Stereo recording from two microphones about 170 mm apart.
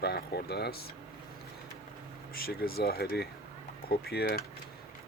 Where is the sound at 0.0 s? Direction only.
70° left (ahead or behind).